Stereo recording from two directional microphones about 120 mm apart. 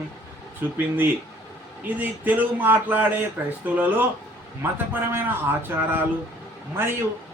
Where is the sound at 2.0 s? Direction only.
15° right (ahead or behind).